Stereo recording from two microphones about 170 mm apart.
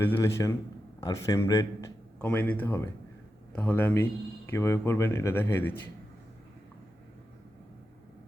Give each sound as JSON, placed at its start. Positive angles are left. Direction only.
{"t": 0.0, "sound": "a man's voice", "side_deg": 15}